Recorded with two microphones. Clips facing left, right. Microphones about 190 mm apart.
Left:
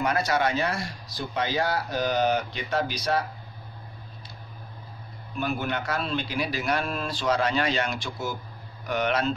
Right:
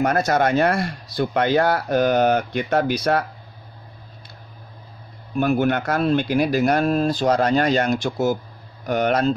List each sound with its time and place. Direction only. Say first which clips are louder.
0.0 s speech: right 6 dB; 45° right (ahead or behind)
5.3 s speech: right 10 dB; 50° right (ahead or behind)